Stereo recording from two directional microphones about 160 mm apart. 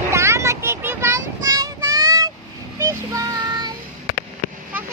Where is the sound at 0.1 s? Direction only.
20° right (ahead or behind).